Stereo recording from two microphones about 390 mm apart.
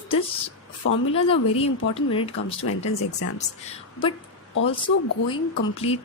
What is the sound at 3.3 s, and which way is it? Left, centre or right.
Speech, centre.